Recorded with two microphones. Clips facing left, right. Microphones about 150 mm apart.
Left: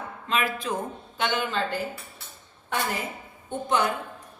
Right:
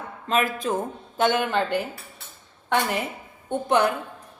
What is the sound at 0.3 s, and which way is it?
A woman's voice, 45° right (ahead or behind).